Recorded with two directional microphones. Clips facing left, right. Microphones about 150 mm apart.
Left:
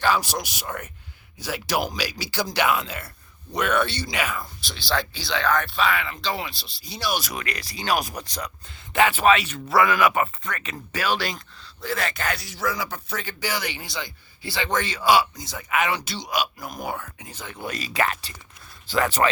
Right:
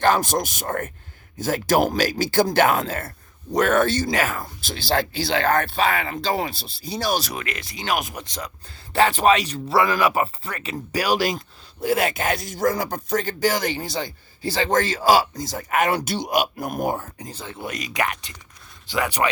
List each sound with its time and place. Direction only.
0.0 s speech: 45° right (ahead or behind); by 8.4 s 25° right (ahead or behind)
8.9 s speech: 35° right (ahead or behind); by 19.3 s 15° right (ahead or behind)